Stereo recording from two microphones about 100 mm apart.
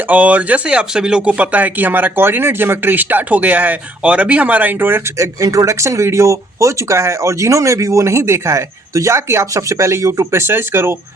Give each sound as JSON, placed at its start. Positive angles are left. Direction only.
{"t": 0.1, "sound": "speech", "side_deg": -15}